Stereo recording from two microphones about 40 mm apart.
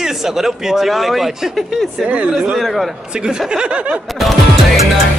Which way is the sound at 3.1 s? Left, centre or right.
Right.